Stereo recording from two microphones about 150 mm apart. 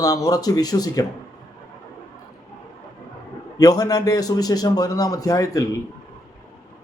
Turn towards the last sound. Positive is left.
turn(degrees=25)  # may be behind; listen again after turning